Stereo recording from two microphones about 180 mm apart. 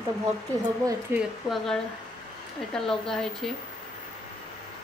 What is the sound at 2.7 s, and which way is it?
Speech, 5° left (ahead or behind).